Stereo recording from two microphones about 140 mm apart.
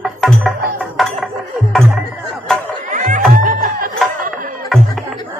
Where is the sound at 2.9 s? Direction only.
65° right (ahead or behind).